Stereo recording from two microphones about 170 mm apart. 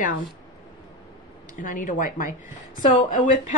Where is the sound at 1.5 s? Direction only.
50° left (ahead or behind).